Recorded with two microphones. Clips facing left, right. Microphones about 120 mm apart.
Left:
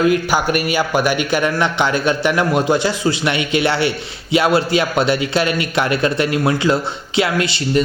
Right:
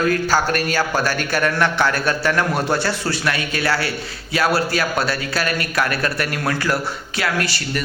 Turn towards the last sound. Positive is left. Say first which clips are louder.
# left 7 dB
turn(degrees=20)  # may be behind; listen again after turning